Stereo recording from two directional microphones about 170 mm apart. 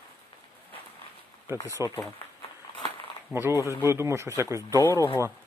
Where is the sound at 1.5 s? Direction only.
20° left (ahead or behind).